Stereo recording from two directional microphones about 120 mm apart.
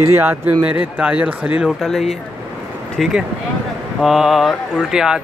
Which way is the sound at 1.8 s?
Centre (ahead or behind).